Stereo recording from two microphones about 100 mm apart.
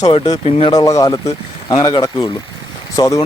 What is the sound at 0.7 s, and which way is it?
Speech, 35° left (ahead or behind).